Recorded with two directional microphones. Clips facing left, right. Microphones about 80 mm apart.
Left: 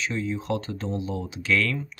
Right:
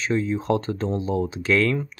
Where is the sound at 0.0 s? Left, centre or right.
Right.